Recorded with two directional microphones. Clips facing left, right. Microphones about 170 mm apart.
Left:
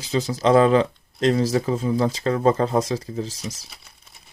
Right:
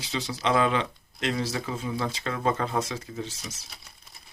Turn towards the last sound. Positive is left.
turn(degrees=35)  # may be behind; listen again after turning